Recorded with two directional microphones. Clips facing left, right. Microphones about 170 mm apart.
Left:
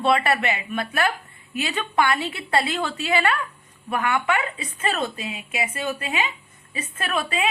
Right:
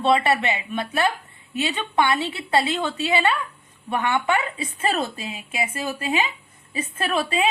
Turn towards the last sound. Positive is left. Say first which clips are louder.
# right 3 dB
turn(degrees=-30)  # may be behind; listen again after turning